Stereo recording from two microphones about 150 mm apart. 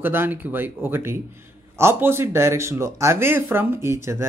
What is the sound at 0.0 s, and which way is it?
Speech, 15° right (ahead or behind).